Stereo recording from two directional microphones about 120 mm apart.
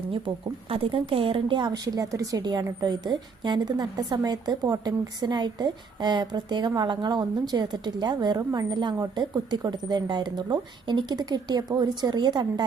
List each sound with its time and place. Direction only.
0.7 s a woman's voice: 50° right (ahead or behind)